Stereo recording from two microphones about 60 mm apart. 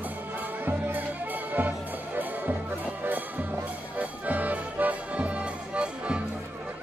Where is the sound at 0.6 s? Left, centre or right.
Right; by 6.2 s centre.